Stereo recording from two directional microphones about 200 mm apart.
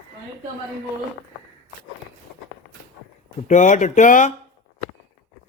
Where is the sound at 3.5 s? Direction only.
35° left (ahead or behind).